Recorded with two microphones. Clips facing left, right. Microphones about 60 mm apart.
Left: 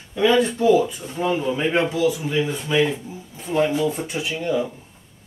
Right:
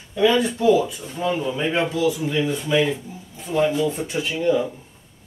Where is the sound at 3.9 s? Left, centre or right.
Centre.